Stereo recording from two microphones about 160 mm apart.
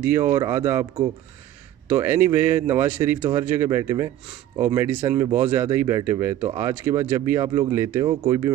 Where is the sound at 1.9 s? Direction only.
15° right (ahead or behind).